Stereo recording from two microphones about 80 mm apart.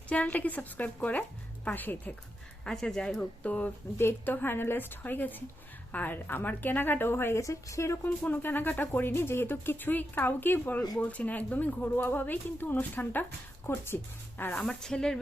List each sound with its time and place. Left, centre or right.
0.1 s speech: centre
2.6 s speech: centre; by 7.4 s left
7.4 s speech: left
8.0 s speech: left
14.6 s speech: centre